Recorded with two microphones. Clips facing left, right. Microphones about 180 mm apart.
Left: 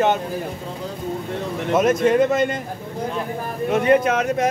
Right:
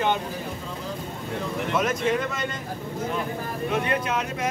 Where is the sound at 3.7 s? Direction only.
45° left (ahead or behind).